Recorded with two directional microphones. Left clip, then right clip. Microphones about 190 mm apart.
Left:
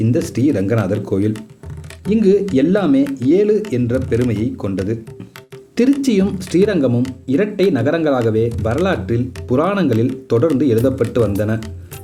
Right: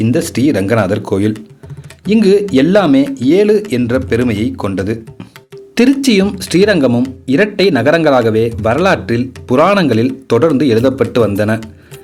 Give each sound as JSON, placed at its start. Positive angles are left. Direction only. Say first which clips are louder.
{"t": 0.0, "sound": "a man's voice", "louder": "right 4 dB", "side_deg": -20}